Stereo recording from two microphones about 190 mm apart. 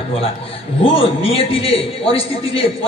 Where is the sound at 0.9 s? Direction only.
30° left (ahead or behind).